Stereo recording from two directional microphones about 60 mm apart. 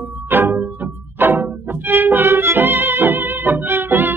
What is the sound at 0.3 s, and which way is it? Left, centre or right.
Music, right.